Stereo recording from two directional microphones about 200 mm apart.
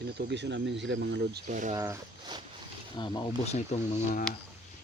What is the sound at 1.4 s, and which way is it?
Speech, 40° right (ahead or behind).